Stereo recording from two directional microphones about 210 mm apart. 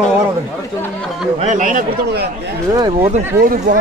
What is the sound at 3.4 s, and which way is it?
Speech, 40° right (ahead or behind).